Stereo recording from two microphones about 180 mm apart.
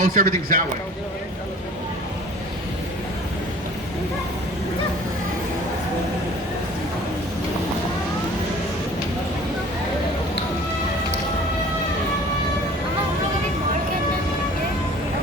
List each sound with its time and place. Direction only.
0.0 s a man's voice: 50° right (ahead or behind)